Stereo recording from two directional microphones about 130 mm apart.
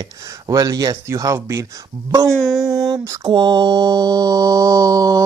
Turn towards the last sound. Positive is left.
turn(degrees=-25)  # may be behind; listen again after turning